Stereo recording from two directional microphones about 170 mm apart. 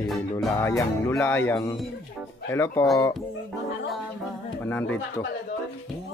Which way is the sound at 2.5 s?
15° left (ahead or behind).